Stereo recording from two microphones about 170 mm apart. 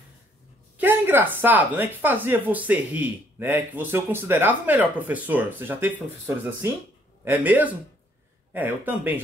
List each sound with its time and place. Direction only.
0.7 s speech: 10° right (ahead or behind)